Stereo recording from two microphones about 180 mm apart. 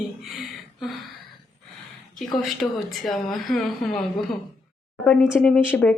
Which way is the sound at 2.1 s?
Centre (ahead or behind).